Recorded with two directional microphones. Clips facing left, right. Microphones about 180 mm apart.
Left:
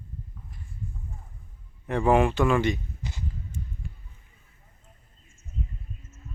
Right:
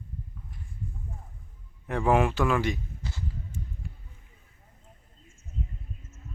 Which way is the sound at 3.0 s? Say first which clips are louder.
Left 1 dB; 20° left (ahead or behind).